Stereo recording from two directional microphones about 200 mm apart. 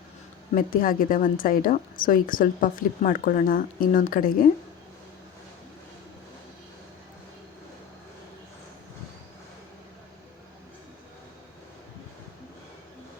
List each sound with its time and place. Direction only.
0.5 s a woman's voice: 45° left (ahead or behind)